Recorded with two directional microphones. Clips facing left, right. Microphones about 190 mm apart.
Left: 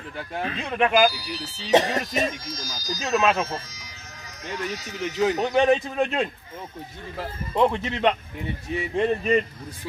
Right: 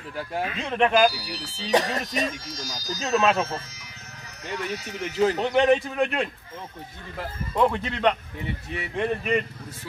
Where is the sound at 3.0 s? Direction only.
10° left (ahead or behind).